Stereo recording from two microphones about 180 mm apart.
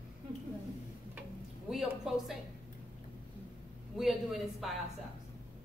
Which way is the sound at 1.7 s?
Centre (ahead or behind).